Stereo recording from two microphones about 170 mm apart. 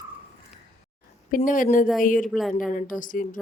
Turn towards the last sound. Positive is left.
turn(degrees=50)  # may be behind; listen again after turning